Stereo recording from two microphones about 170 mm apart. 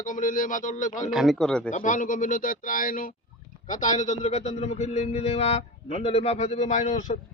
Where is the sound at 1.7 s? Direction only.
50° left (ahead or behind).